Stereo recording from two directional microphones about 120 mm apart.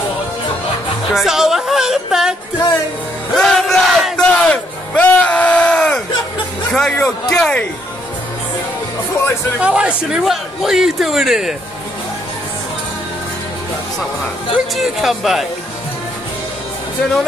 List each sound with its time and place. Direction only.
1.1 s music: centre (ahead or behind)
3.3 s battle cry: 5° left (ahead or behind)
6.7 s music: 5° left (ahead or behind)
7.0 s speech: 5° left (ahead or behind)
9.1 s music: 20° left (ahead or behind)
9.6 s speech: 10° right (ahead or behind)
14.8 s speech: centre (ahead or behind)